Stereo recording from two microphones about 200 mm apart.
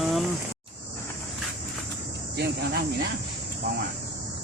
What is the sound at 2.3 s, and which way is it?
Cricket, 55° right (ahead or behind).